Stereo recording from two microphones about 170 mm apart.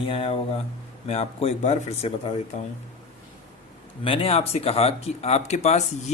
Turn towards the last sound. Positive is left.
turn(degrees=40)  # may be behind; listen again after turning